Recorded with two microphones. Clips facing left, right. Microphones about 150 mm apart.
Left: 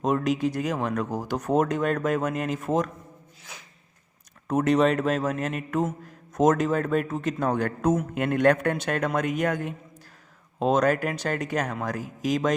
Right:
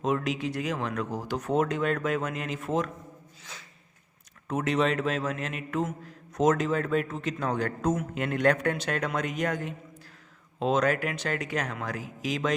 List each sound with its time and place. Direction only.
0.0 s speech: 40° left (ahead or behind)
4.4 s speech: 45° left (ahead or behind)